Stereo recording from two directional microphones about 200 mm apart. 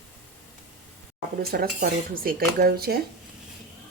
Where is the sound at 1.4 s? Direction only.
50° right (ahead or behind).